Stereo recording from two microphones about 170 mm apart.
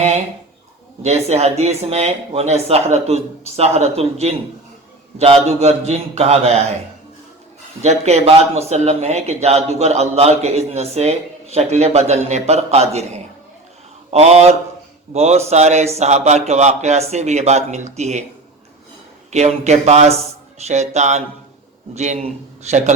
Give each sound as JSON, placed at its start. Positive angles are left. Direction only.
{"t": 1.0, "sound": "speech", "side_deg": -40}
{"t": 7.8, "sound": "speech", "side_deg": -40}
{"t": 14.1, "sound": "speech", "side_deg": -40}
{"t": 19.3, "sound": "speech", "side_deg": -40}